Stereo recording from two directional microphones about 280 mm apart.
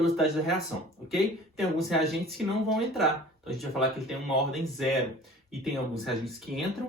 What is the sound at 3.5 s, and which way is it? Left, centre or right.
Speech, centre.